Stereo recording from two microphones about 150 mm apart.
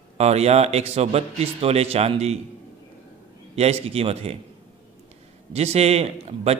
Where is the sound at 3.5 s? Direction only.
45° right (ahead or behind).